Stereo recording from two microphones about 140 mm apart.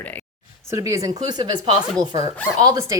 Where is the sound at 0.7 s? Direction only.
20° right (ahead or behind).